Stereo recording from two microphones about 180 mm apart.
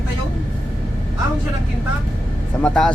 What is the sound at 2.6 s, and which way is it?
Speech, 5° left (ahead or behind).